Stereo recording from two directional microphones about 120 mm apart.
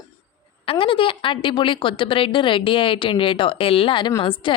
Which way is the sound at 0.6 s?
50° left (ahead or behind).